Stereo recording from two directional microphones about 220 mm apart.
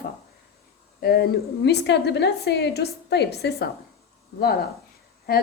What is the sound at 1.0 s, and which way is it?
A woman's voice, 45° left (ahead or behind).